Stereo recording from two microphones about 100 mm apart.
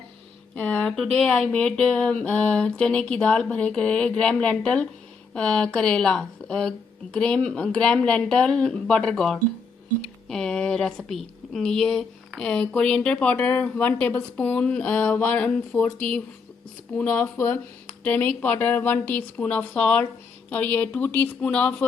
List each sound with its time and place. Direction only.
0.5 s speech: 15° left (ahead or behind)
17.3 s speech: 25° left (ahead or behind)